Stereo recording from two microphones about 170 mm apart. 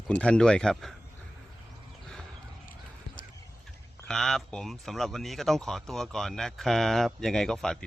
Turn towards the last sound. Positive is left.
turn(degrees=5)  # may be behind; listen again after turning